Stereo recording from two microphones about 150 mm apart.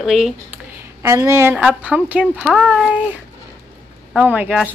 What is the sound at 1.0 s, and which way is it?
Speech, 20° right (ahead or behind).